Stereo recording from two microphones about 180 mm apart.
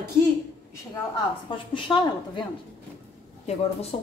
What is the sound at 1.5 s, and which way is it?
Speech, 25° left (ahead or behind).